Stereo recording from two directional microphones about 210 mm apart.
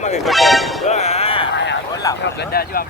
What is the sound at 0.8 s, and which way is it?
Music, 30° left (ahead or behind).